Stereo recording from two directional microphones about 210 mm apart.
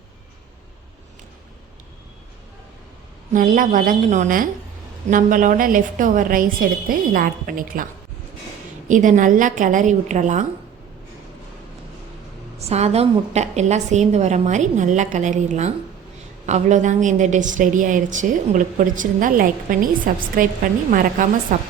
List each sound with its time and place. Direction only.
3.3 s a woman's voice: 40° right (ahead or behind)
8.9 s a woman's voice: 35° right (ahead or behind)
12.5 s a woman's voice: 30° right (ahead or behind)